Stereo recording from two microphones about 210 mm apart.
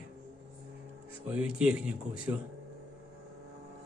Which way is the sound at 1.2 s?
5° right (ahead or behind).